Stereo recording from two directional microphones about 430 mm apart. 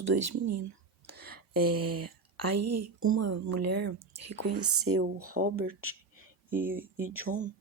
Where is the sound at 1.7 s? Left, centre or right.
Right.